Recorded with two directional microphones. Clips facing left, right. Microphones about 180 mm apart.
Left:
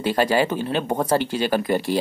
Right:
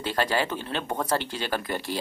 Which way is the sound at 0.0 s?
10° left (ahead or behind).